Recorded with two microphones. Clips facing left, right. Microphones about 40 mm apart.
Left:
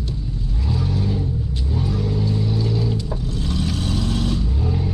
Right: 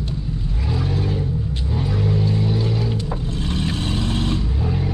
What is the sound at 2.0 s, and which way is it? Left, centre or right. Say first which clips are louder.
Vehicle: right 4 dB; right.